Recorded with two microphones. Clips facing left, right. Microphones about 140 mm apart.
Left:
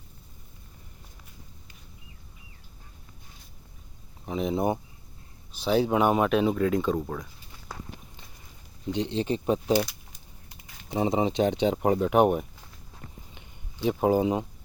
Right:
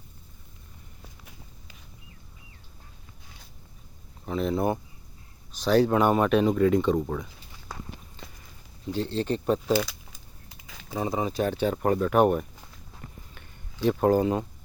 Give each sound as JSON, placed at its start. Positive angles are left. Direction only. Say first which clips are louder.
{"t": 4.3, "sound": "speech", "louder": "right 1 dB", "side_deg": 15}
{"t": 8.9, "sound": "speech", "louder": "even", "side_deg": 15}
{"t": 10.8, "sound": "speech", "louder": "left 3 dB", "side_deg": 25}
{"t": 13.3, "sound": "a sound", "louder": "even", "side_deg": 15}